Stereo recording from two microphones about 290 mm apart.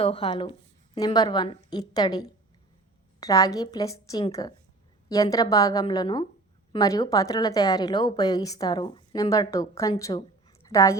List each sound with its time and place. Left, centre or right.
0.0 s a woman's voice: centre